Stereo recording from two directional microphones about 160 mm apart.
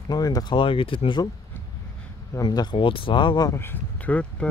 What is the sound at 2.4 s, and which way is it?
Speech, 25° left (ahead or behind).